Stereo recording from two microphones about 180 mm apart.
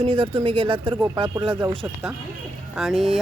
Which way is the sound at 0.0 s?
30° right (ahead or behind).